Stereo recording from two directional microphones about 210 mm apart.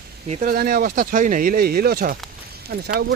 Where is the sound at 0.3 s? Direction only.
40° right (ahead or behind).